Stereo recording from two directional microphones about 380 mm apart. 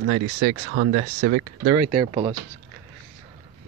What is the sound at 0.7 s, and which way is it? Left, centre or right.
Speech, centre.